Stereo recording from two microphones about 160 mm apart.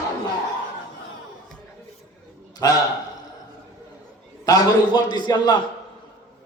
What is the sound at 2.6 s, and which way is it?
Speech, 20° left (ahead or behind).